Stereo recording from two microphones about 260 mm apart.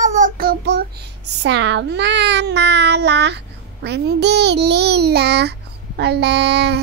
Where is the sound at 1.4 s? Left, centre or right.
Right.